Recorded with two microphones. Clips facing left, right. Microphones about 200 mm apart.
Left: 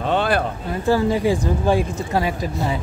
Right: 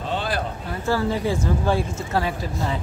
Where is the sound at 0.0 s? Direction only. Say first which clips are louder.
Left 7 dB; 60° left (ahead or behind).